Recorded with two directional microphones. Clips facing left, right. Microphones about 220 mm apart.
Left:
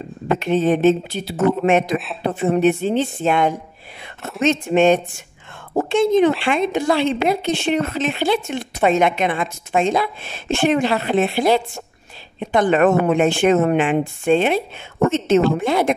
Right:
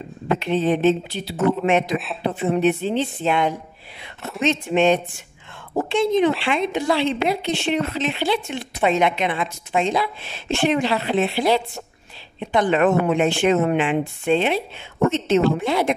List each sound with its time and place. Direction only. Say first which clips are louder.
0.4 s speech: left 3 dB; 45° left (ahead or behind)